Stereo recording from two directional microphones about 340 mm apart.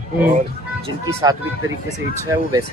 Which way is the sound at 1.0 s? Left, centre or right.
Centre.